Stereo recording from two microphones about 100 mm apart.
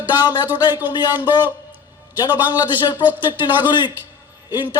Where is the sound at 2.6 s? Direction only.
45° left (ahead or behind).